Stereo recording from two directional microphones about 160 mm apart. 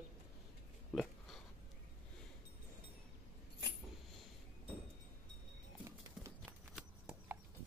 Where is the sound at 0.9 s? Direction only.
Centre (ahead or behind).